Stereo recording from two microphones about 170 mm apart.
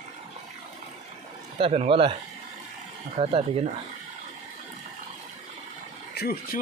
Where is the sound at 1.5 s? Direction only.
30° right (ahead or behind).